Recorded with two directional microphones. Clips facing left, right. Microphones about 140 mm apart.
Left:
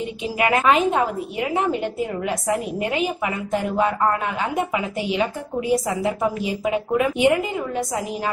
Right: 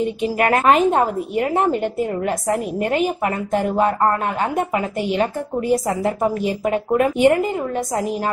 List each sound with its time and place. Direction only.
0.4 s a woman's voice: 45° right (ahead or behind)